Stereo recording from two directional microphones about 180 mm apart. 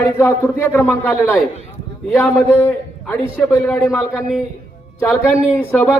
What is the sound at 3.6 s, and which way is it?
Speech, centre (ahead or behind).